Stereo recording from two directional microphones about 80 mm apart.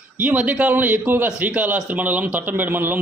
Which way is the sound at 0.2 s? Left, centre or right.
Centre.